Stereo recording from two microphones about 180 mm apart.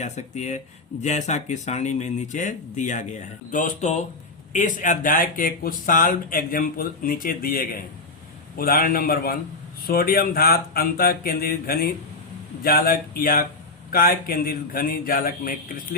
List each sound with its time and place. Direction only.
0.0 s speech: 40° left (ahead or behind)